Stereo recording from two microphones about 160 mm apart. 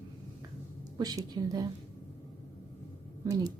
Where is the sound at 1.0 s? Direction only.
25° right (ahead or behind).